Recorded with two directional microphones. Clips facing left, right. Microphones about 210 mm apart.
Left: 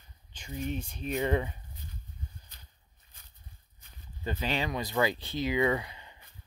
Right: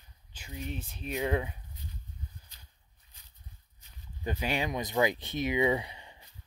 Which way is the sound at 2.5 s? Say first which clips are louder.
Left 2 dB; 55° left (ahead or behind).